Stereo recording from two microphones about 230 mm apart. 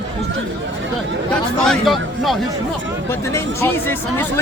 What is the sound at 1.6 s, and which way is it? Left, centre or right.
A man's voice, centre.